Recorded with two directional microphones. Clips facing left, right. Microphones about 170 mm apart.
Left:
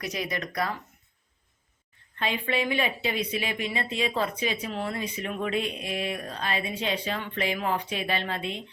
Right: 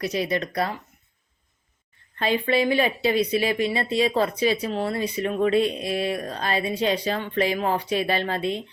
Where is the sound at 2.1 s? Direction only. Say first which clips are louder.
Right 6 dB; 35° right (ahead or behind).